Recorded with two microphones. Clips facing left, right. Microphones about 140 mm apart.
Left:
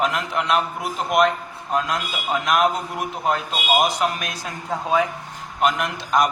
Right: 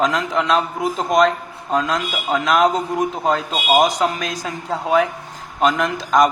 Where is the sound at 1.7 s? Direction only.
90° right.